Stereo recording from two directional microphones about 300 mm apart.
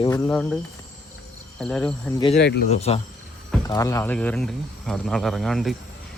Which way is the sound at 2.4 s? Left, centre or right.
Left.